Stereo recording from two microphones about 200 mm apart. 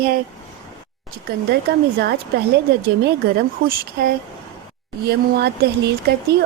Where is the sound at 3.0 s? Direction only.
50° right (ahead or behind).